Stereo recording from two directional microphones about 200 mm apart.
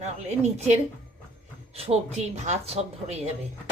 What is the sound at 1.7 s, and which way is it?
A woman's voice, 30° right (ahead or behind).